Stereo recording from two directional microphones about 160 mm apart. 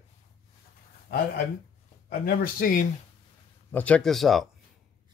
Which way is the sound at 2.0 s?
65° left (ahead or behind).